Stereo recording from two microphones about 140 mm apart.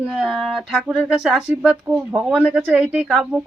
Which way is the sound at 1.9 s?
15° right (ahead or behind).